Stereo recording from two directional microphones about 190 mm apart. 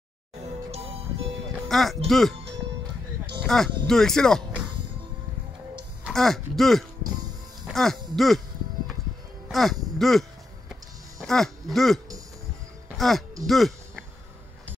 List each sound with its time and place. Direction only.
0.4 s music: 35° right (ahead or behind)
1.7 s speech: centre (ahead or behind)
3.4 s speech: centre (ahead or behind)
6.0 s speech: centre (ahead or behind)
9.5 s speech: centre (ahead or behind)
10.7 s music: centre (ahead or behind)